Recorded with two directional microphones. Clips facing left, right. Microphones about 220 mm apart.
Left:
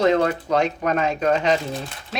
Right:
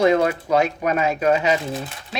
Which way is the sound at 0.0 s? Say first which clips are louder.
Right 1 dB; 10° right (ahead or behind).